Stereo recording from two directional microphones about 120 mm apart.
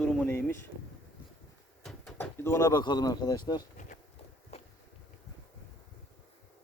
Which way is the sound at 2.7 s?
35° left (ahead or behind).